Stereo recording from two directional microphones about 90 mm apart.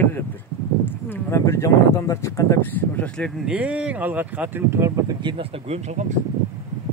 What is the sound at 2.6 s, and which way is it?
Speech, 20° left (ahead or behind).